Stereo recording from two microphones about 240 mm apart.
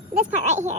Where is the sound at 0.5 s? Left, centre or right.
Right.